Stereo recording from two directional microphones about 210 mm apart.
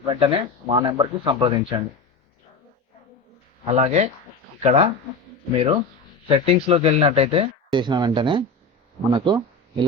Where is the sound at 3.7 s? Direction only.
30° right (ahead or behind).